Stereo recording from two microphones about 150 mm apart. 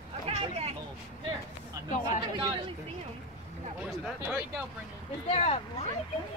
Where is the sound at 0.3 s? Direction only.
40° right (ahead or behind).